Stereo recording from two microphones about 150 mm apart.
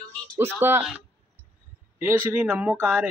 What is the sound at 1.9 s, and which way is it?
A woman's voice, 15° right (ahead or behind).